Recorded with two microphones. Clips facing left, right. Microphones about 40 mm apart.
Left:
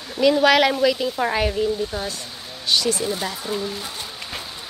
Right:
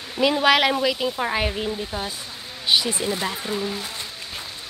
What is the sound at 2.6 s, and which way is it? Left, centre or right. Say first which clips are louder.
Speech: even; right.